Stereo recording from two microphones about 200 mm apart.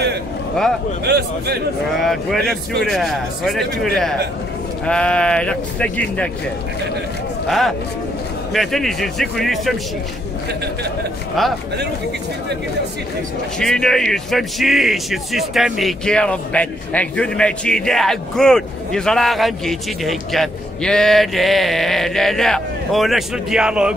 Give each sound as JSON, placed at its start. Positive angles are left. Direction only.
{"t": 1.0, "sound": "speech", "side_deg": -55}
{"t": 2.0, "sound": "speech", "side_deg": 0}
{"t": 7.4, "sound": "speech", "side_deg": 0}
{"t": 13.6, "sound": "speech", "side_deg": 5}